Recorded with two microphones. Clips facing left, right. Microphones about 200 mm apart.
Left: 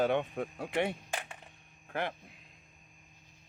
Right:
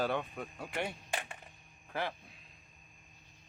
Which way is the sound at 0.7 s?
65° left (ahead or behind).